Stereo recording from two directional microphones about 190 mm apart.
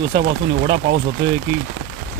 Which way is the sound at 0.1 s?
55° right (ahead or behind).